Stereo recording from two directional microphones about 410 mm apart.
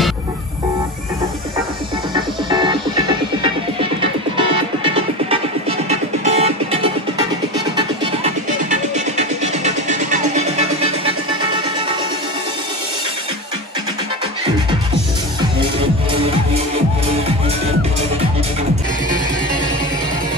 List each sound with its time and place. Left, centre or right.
2.1 s music: centre